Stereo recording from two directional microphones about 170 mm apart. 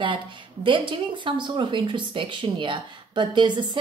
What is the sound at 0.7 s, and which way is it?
Speech, 30° right (ahead or behind).